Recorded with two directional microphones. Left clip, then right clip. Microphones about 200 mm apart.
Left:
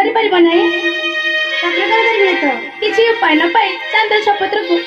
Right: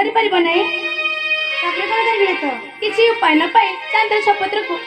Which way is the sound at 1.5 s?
50° left (ahead or behind).